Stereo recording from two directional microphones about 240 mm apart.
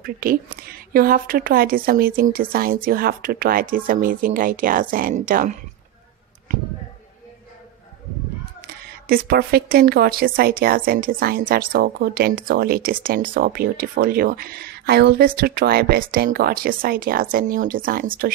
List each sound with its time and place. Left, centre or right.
0.0 s a woman's voice: right
8.6 s a woman's voice: right